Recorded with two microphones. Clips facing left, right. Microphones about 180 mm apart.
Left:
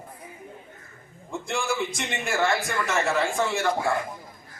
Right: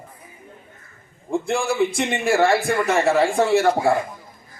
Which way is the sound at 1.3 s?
30° right (ahead or behind).